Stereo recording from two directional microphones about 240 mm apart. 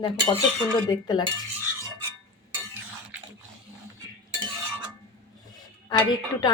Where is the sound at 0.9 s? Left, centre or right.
Centre.